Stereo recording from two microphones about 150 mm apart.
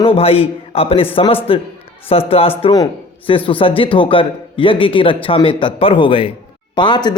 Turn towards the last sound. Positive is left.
turn(degrees=30)  # may be behind; listen again after turning